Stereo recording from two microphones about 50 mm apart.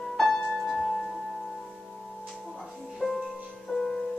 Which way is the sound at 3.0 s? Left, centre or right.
Left.